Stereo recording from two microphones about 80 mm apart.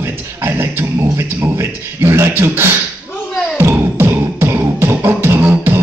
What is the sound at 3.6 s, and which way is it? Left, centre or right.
Beatboxing, right.